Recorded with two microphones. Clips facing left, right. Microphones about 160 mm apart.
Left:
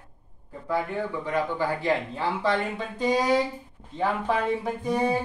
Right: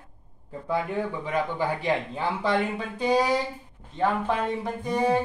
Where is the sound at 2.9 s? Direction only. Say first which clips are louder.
Left 1 dB; centre (ahead or behind).